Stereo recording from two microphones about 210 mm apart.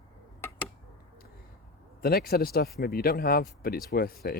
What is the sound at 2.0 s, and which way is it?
Speech, 45° left (ahead or behind).